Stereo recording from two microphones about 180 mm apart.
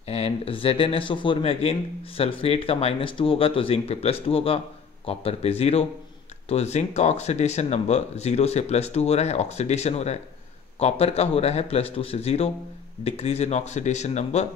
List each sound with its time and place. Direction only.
0.1 s speech: 35° left (ahead or behind)